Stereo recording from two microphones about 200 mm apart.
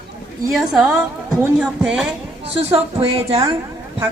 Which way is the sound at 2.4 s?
30° right (ahead or behind).